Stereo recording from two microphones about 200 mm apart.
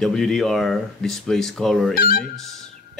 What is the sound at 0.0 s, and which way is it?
Speech, centre (ahead or behind).